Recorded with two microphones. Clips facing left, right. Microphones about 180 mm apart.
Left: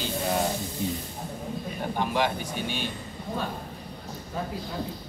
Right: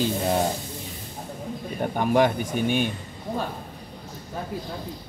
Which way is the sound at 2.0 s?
50° right (ahead or behind).